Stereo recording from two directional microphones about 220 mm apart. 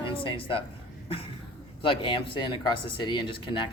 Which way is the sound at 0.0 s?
25° left (ahead or behind).